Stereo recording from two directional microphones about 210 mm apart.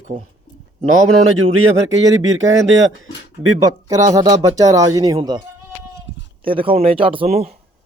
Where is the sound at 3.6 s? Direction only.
15° right (ahead or behind).